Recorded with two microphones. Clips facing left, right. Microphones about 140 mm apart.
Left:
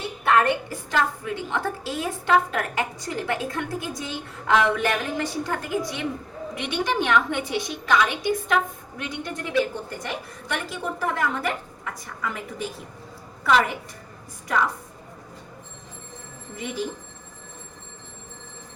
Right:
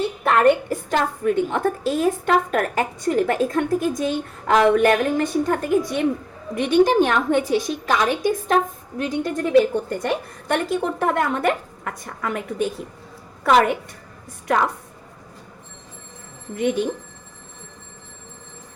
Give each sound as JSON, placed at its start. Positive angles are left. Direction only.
{"t": 0.3, "sound": "a woman's voice", "side_deg": -50}
{"t": 16.6, "sound": "a woman's voice", "side_deg": -65}